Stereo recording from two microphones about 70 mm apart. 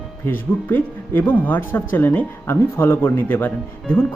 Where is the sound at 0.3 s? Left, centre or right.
Left.